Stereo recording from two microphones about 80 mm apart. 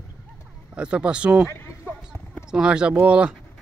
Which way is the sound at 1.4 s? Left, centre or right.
Left.